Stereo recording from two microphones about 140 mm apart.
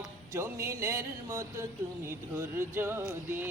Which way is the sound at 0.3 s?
20° right (ahead or behind).